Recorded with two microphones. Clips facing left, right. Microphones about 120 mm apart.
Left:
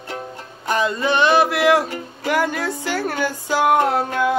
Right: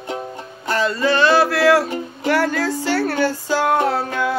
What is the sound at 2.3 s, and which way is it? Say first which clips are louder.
Music: right 2 dB; 15° left (ahead or behind).